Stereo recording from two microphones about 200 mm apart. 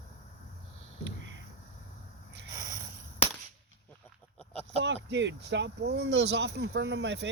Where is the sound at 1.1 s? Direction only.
65° right (ahead or behind).